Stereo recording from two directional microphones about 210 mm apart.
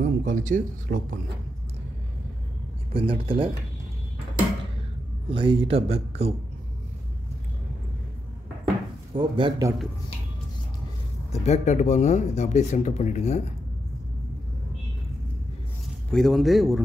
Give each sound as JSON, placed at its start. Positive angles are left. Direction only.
{"t": 0.0, "sound": "speech", "side_deg": -35}
{"t": 2.9, "sound": "speech", "side_deg": -25}
{"t": 5.3, "sound": "speech", "side_deg": -25}
{"t": 9.1, "sound": "speech", "side_deg": -20}
{"t": 11.4, "sound": "speech", "side_deg": 35}
{"t": 16.1, "sound": "a man's voice", "side_deg": 0}